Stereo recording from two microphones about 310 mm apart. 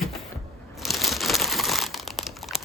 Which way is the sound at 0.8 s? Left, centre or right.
Centre.